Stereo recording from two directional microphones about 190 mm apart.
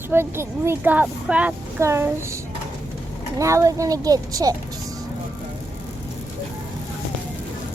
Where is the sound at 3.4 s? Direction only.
15° right (ahead or behind).